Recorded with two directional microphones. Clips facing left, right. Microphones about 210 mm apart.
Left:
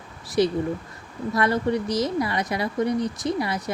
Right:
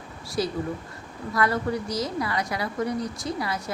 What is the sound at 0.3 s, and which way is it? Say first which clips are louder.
A woman's voice: left 6 dB; 20° left (ahead or behind).